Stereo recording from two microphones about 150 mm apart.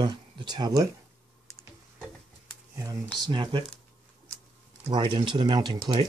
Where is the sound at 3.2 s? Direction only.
30° right (ahead or behind).